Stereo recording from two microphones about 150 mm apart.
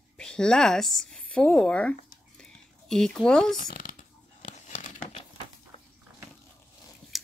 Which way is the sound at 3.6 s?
70° left (ahead or behind).